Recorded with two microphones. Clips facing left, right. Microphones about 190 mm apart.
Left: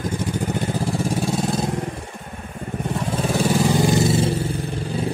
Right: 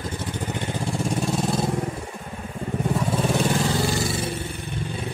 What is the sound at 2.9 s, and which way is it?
Vehicle, centre (ahead or behind).